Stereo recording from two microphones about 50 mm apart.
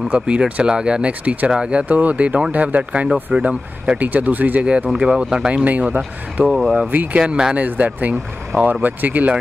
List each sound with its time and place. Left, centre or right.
0.1 s speech: right
0.6 s speech: centre
1.5 s speech: centre
4.0 s speech: right
4.6 s speech: centre
5.5 s speech: right
6.4 s speech: centre
6.9 s speech: right